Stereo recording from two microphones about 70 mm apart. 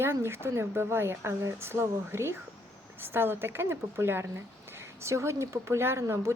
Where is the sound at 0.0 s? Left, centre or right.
Right.